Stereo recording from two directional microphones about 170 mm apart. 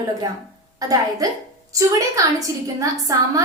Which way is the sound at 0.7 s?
20° right (ahead or behind).